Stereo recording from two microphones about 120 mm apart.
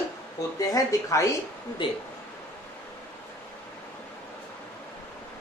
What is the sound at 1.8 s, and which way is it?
Speech, 40° left (ahead or behind).